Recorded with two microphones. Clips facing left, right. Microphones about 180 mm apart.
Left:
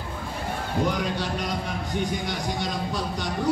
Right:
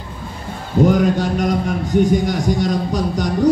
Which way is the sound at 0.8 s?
45° right (ahead or behind).